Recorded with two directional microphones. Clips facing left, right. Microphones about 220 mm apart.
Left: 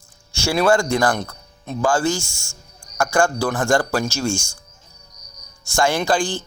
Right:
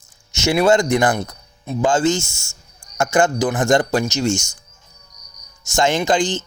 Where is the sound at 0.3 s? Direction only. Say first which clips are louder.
Right 2 dB; 20° right (ahead or behind).